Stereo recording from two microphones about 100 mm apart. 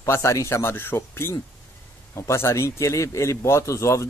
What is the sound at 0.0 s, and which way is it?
Speech, 30° left (ahead or behind).